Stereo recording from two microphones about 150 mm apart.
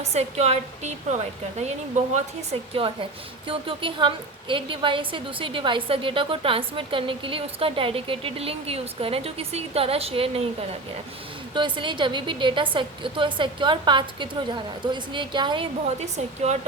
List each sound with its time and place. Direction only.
0.0 s a woman's voice: 45° right (ahead or behind)
2.1 s a woman's voice: 40° right (ahead or behind)